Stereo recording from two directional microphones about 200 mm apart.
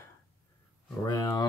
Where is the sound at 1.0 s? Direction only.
20° left (ahead or behind).